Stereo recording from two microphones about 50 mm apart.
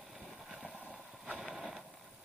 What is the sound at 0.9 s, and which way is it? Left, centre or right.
Vehicle, centre.